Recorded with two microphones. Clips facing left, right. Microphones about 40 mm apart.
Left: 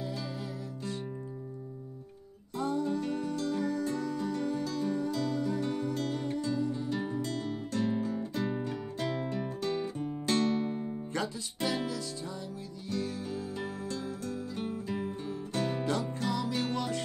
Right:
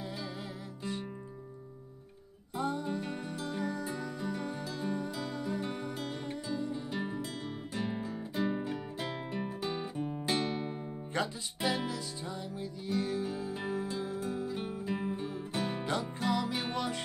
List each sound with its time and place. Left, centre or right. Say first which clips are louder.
2.5 s music: left 3 dB; centre